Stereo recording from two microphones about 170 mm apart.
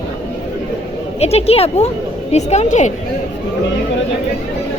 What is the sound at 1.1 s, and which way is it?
Speech, 40° left (ahead or behind).